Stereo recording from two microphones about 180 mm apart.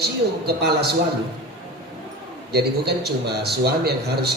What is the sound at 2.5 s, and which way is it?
A man's voice, 65° right (ahead or behind).